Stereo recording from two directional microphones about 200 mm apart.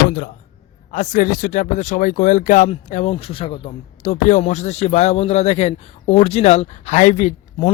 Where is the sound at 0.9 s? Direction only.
40° left (ahead or behind).